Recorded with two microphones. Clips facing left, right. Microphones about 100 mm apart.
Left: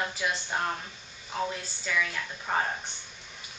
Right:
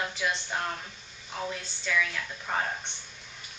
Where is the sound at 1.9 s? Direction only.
5° left (ahead or behind).